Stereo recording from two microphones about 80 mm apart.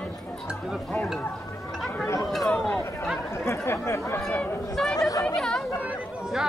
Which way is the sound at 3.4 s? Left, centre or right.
Left.